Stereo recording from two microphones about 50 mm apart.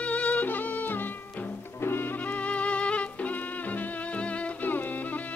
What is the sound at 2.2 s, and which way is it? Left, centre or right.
Music, left.